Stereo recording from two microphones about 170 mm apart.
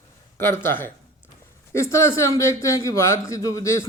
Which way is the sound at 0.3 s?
15° left (ahead or behind).